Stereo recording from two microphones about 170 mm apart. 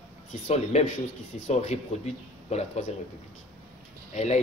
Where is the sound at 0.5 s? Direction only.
40° left (ahead or behind).